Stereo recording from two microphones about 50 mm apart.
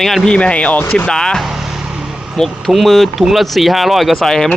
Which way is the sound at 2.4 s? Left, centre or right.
Centre.